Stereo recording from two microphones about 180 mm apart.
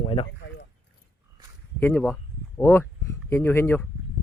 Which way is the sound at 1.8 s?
10° left (ahead or behind).